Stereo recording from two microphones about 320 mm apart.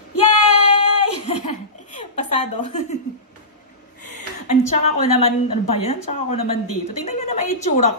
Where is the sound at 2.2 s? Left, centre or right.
Left.